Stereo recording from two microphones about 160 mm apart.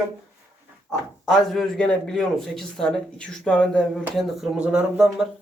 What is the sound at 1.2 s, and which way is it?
Speech, centre (ahead or behind).